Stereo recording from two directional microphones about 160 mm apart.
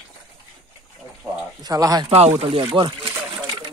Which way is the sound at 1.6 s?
25° right (ahead or behind).